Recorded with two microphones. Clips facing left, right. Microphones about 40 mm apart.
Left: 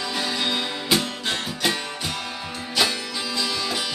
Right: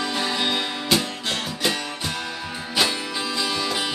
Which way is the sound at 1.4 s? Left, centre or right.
Centre.